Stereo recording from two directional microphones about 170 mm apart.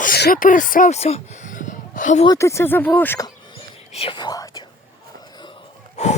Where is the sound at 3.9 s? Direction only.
30° left (ahead or behind).